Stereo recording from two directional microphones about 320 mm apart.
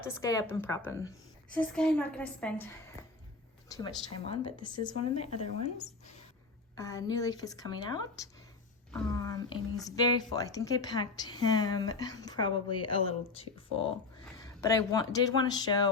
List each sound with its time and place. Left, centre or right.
0.0 s a woman's voice: centre
3.7 s a woman's voice: centre
6.7 s a woman's voice: centre
8.9 s a sound: centre
9.8 s a woman's voice: centre